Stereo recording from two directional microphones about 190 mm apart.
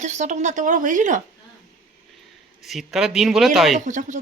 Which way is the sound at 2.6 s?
Centre (ahead or behind).